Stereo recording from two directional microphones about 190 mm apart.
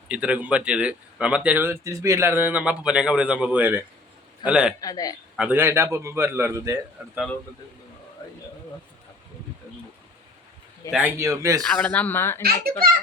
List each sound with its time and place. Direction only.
0.1 s speech: 5° right (ahead or behind)
4.8 s a man's voice: 20° left (ahead or behind)
5.4 s speech: 10° right (ahead or behind)
10.9 s speech: 10° right (ahead or behind)
11.7 s speech: 10° left (ahead or behind)
12.4 s a child's voice: 55° right (ahead or behind)